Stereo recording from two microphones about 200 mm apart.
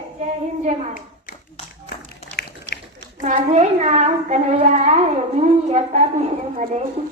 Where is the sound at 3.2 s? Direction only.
35° right (ahead or behind).